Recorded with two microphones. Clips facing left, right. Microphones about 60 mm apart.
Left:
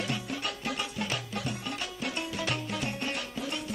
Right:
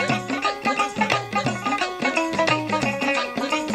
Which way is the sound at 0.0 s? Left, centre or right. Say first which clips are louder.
Right 11 dB; right.